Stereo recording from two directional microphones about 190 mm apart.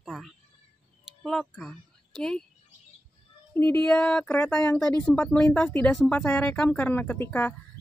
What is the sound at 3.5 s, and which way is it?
Speech, 10° left (ahead or behind).